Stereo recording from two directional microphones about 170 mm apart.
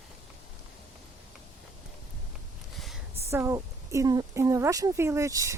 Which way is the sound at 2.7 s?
Centre (ahead or behind).